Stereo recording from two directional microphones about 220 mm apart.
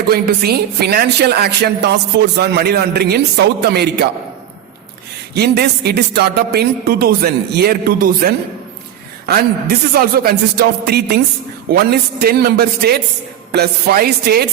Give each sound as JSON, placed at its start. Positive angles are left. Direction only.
{"t": 0.1, "sound": "a woman's voice", "side_deg": -45}
{"t": 5.3, "sound": "a woman's voice", "side_deg": -45}